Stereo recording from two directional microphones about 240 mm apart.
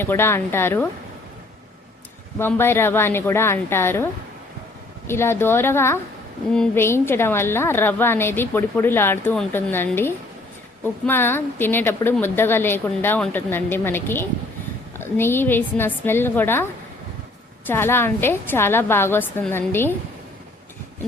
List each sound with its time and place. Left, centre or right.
0.0 s a woman's voice: centre
2.4 s a woman's voice: centre
17.7 s a woman's voice: centre